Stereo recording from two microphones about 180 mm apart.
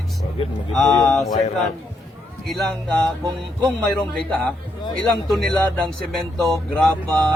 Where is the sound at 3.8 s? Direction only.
5° left (ahead or behind).